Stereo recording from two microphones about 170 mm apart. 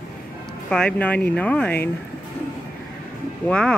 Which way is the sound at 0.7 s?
5° left (ahead or behind).